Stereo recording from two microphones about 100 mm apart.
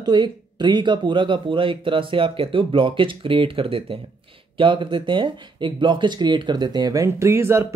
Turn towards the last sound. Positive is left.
turn(degrees=-25)  # may be behind; listen again after turning